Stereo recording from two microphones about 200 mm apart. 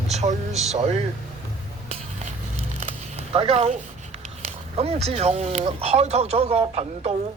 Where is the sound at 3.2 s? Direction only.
30° right (ahead or behind).